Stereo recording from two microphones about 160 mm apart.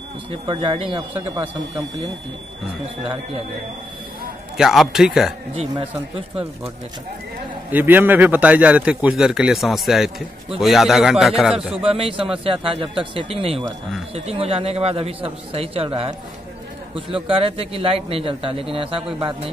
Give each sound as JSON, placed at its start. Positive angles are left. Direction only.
{"t": 0.3, "sound": "a man's voice", "side_deg": -35}
{"t": 4.6, "sound": "speech", "side_deg": 0}
{"t": 5.5, "sound": "a man's voice", "side_deg": -35}
{"t": 7.7, "sound": "a man's voice", "side_deg": -10}
{"t": 11.5, "sound": "a man's voice", "side_deg": -35}